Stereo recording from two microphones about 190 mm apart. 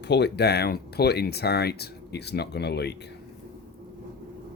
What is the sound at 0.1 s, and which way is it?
Speech, 60° left (ahead or behind).